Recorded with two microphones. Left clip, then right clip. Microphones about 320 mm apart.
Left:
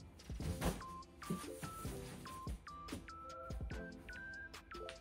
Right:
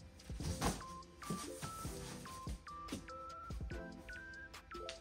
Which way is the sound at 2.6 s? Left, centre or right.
Centre.